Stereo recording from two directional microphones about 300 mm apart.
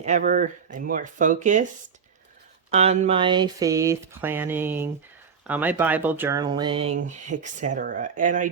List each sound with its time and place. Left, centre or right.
0.0 s speech: right
2.6 s speech: right